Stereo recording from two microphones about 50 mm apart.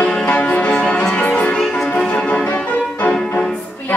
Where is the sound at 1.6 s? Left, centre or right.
Centre.